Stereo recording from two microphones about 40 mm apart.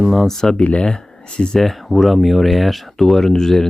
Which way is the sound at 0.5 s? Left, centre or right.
Left.